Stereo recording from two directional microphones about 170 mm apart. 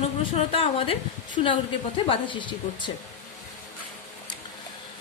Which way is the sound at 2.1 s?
30° left (ahead or behind).